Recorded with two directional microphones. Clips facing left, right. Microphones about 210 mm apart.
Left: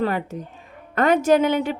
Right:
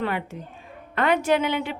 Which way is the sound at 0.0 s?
40° left (ahead or behind).